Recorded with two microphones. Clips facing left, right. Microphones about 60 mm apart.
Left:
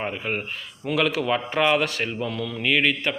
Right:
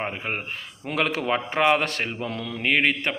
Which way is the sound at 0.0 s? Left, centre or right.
Right.